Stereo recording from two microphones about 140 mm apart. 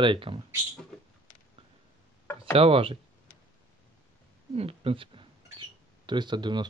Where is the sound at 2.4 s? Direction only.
40° right (ahead or behind).